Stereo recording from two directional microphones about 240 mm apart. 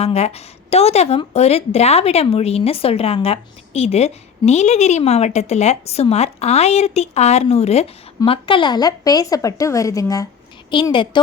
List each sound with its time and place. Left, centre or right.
0.0 s speech: left